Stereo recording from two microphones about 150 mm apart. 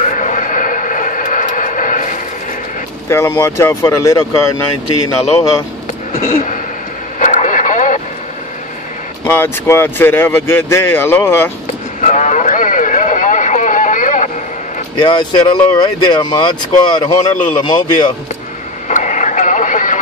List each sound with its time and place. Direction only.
0.0 s a sound: 60° left (ahead or behind)
3.1 s speech: 15° left (ahead or behind)
6.1 s a sound: 80° left
7.2 s radio: 55° left (ahead or behind)
9.2 s speech: 15° left (ahead or behind)
12.0 s vehicle: 55° left (ahead or behind)
15.0 s speech: 30° left (ahead or behind)
18.9 s radio: 55° left (ahead or behind)